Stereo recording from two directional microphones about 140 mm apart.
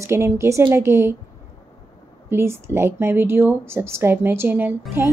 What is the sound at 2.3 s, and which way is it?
Speech, 20° right (ahead or behind).